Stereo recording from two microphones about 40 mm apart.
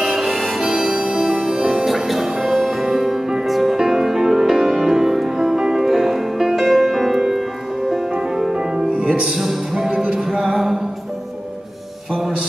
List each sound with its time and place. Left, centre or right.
0.2 s harmonica: centre
0.6 s music: centre
1.9 s music: centre
8.5 s music: right
9.3 s music: centre
9.8 s music: centre
10.4 s music: centre
12.1 s music: centre